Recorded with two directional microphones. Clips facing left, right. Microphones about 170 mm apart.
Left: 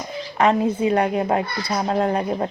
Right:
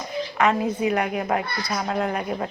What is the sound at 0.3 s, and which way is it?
A child's voice, 30° left (ahead or behind).